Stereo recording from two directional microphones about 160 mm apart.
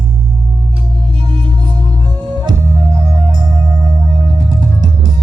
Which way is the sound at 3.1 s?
25° right (ahead or behind).